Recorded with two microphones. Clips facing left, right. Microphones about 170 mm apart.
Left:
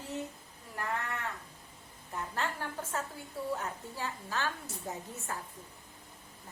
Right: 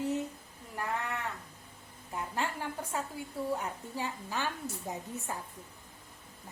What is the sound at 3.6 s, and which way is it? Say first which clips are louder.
A woman's voice: right 2 dB; 15° right (ahead or behind).